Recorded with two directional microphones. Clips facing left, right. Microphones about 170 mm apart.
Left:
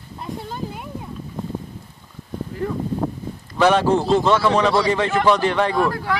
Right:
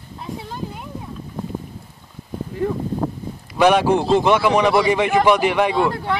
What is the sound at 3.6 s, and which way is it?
Speech, 15° right (ahead or behind).